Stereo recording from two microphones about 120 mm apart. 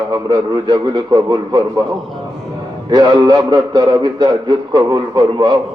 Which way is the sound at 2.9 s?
35° right (ahead or behind).